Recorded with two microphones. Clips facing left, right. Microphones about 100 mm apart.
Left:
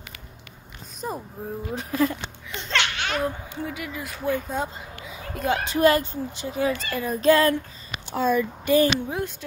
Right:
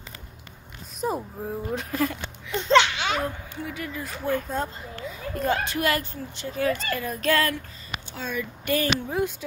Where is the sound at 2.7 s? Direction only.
25° right (ahead or behind).